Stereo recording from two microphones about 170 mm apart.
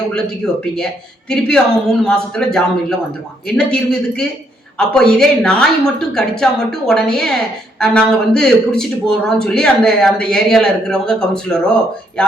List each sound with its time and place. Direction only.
0.1 s a man's voice: 5° left (ahead or behind)